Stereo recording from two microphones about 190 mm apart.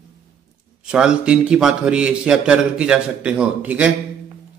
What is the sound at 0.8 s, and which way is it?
A man's voice, 5° right (ahead or behind).